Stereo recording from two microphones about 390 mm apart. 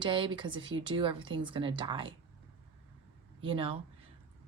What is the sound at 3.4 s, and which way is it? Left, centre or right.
Speech, centre.